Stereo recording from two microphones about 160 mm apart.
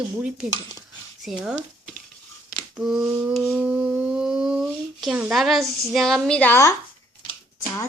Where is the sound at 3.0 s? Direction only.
20° right (ahead or behind).